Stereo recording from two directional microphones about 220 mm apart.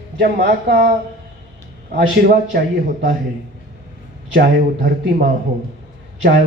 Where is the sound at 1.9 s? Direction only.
40° right (ahead or behind).